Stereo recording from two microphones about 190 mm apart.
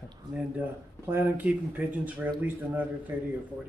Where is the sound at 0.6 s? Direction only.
10° right (ahead or behind).